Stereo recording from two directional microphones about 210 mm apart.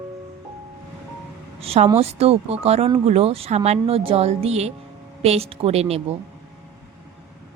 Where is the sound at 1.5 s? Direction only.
30° right (ahead or behind).